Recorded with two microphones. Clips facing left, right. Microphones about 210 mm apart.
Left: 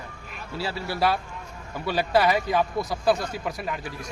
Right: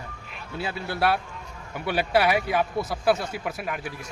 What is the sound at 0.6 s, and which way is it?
Speech, 20° right (ahead or behind).